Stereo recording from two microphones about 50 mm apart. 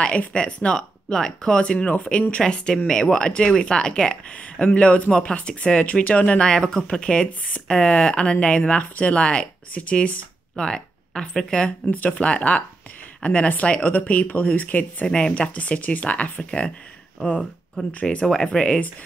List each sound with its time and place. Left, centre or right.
0.0 s speech: left
6.4 s speech: centre; by 15.0 s left
15.0 s speech: centre
18.0 s speech: centre